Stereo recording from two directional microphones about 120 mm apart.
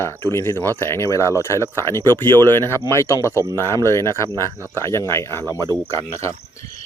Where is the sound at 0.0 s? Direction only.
25° left (ahead or behind).